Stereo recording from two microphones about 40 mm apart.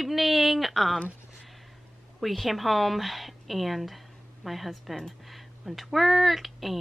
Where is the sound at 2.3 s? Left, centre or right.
Centre.